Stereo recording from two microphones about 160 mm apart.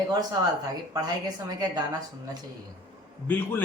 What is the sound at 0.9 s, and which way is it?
Speech, 25° right (ahead or behind).